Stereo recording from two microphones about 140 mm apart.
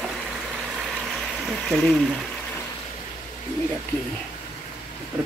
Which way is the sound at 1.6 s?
5° left (ahead or behind).